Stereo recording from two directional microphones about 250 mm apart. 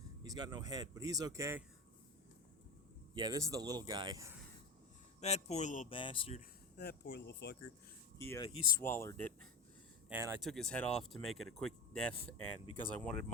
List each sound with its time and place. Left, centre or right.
0.2 s speech: centre
3.2 s speech: centre
5.2 s speech: left
6.7 s speech: left
8.2 s speech: centre
8.4 s speech: left
8.8 s speech: centre
10.1 s speech: centre
10.4 s speech: centre